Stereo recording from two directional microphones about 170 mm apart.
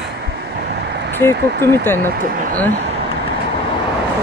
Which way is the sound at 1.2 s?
15° left (ahead or behind).